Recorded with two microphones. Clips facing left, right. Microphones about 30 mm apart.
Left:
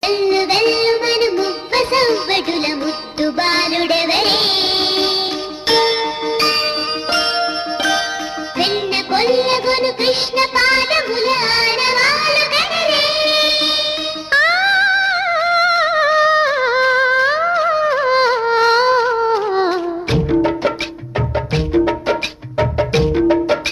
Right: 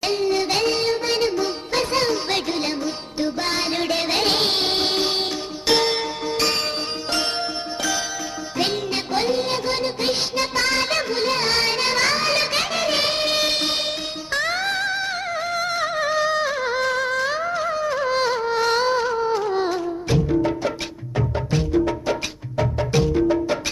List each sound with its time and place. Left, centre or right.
0.0 s music: left